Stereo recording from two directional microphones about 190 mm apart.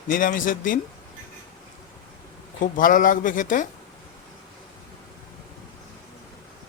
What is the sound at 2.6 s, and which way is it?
A man's voice, 45° left (ahead or behind).